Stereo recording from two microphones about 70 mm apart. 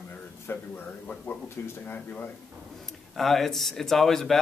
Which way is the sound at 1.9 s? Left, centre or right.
Left.